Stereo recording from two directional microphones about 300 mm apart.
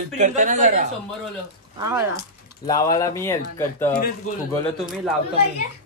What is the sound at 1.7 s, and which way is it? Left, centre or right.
Speech, centre.